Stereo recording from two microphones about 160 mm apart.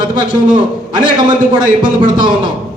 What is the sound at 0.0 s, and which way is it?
A man's voice, 30° right (ahead or behind).